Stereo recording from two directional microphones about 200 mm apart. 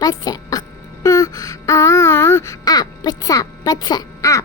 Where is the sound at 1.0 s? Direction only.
15° left (ahead or behind).